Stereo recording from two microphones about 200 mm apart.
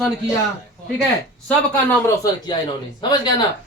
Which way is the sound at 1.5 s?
10° left (ahead or behind).